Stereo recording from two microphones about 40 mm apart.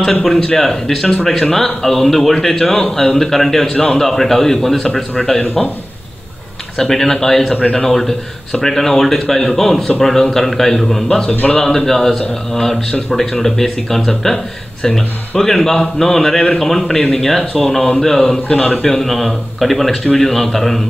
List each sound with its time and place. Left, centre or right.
0.0 s speech: centre
0.4 s speech: centre
0.7 s speech: centre
6.8 s speech: centre